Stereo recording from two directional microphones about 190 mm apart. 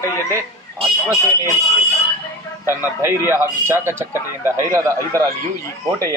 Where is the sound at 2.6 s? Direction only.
10° right (ahead or behind).